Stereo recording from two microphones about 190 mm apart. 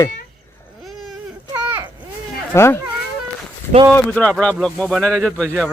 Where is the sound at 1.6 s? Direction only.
10° right (ahead or behind).